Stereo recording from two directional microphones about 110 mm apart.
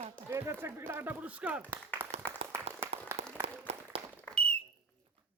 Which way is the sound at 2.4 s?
70° right (ahead or behind).